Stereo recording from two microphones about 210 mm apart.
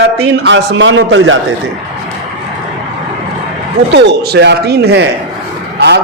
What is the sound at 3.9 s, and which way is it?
A man's voice, 50° right (ahead or behind).